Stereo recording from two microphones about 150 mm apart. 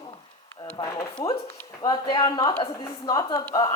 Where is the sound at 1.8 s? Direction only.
30° left (ahead or behind).